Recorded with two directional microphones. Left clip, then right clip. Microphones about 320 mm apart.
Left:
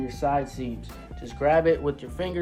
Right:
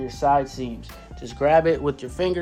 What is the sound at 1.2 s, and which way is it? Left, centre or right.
Speech, right.